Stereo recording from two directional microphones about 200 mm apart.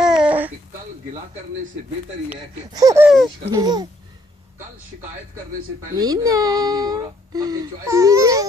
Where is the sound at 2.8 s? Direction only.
15° right (ahead or behind).